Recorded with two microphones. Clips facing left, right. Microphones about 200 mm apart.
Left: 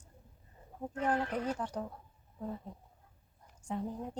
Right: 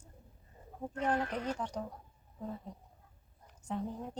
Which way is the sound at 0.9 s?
10° left (ahead or behind).